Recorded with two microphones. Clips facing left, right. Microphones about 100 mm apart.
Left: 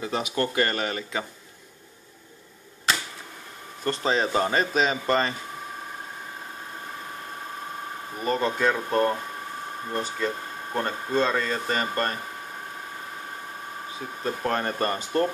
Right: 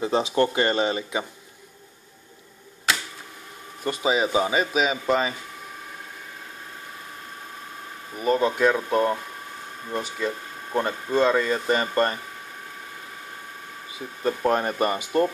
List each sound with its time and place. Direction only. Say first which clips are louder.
0.0 s speech: right 5 dB; 25° right (ahead or behind)
3.8 s speech: right 1 dB; 10° right (ahead or behind)
8.2 s speech: right 4 dB; 5° right (ahead or behind)
14.4 s speech: right 3 dB; 15° right (ahead or behind)